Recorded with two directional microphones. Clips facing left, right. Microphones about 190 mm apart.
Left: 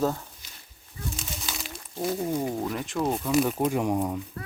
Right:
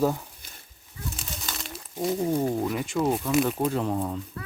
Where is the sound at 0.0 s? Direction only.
10° right (ahead or behind).